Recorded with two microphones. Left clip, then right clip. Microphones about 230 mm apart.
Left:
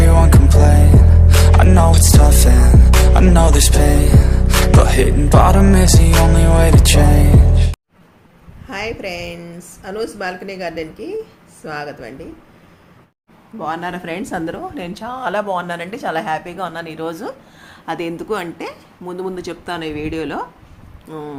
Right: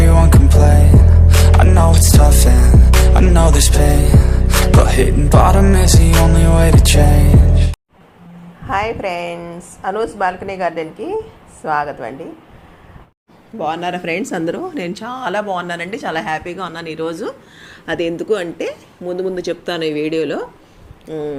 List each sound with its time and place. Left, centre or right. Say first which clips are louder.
0.0 s music: even; centre
8.7 s speech: right 6 dB; centre
13.6 s speech: right 3 dB; centre